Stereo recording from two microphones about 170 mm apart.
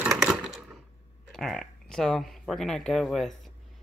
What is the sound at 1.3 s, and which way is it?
Speech, centre (ahead or behind).